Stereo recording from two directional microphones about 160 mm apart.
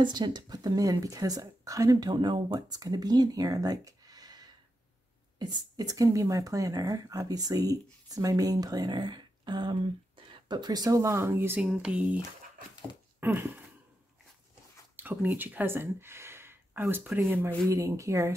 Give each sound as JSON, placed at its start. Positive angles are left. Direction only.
{"t": 0.0, "sound": "speech", "side_deg": -30}
{"t": 13.2, "sound": "speech", "side_deg": -15}
{"t": 15.0, "sound": "speech", "side_deg": -10}